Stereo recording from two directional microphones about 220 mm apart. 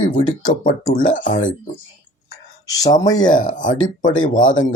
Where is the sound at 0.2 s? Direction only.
20° left (ahead or behind).